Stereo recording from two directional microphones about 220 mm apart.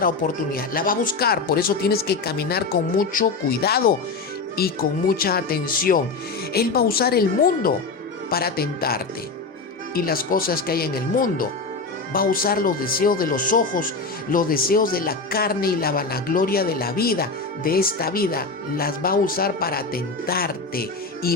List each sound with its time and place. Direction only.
0.0 s speech: 40° left (ahead or behind)